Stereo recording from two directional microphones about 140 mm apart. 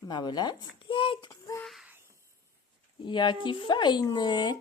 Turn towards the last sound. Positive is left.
turn(degrees=30)  # may be behind; listen again after turning